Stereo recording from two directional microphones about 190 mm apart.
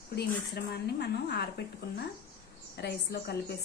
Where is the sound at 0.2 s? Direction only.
60° left (ahead or behind).